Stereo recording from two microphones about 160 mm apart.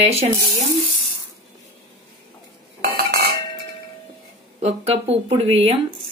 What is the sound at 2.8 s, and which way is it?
Cutlery, 80° right.